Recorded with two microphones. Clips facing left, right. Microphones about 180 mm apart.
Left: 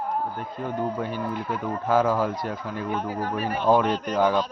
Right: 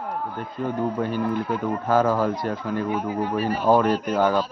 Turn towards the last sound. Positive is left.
turn(degrees=0)  # may be behind; listen again after turning